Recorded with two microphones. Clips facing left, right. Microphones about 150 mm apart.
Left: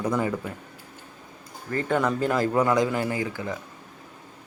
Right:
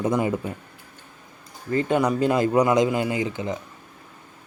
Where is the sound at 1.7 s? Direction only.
20° right (ahead or behind).